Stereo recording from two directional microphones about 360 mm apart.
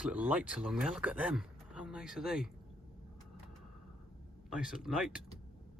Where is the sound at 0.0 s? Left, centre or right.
Centre.